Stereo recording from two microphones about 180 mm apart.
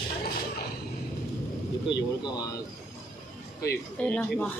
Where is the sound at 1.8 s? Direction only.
25° left (ahead or behind).